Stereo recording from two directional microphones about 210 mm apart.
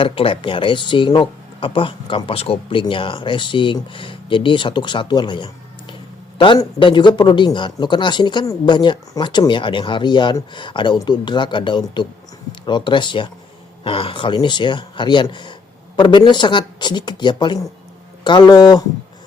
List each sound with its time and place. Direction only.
0.0 s speech: 25° left (ahead or behind)